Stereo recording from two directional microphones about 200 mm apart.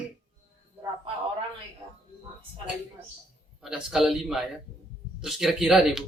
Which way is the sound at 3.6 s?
5° right (ahead or behind).